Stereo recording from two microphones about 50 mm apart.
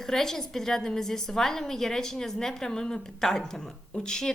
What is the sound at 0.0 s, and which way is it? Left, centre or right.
A woman's voice, centre.